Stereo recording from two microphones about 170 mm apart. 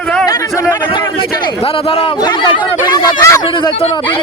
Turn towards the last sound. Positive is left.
turn(degrees=20)  # may be behind; listen again after turning